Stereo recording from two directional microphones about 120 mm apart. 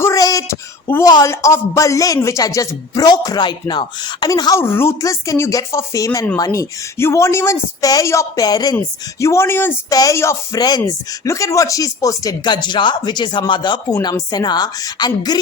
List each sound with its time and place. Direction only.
0.0 s a sound: 30° left (ahead or behind)
1.0 s a man's voice: 30° left (ahead or behind)
4.6 s a man's voice: 20° left (ahead or behind)
9.9 s speech: 30° left (ahead or behind)